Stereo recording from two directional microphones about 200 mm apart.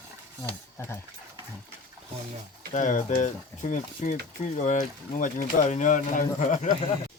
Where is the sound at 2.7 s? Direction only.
40° left (ahead or behind).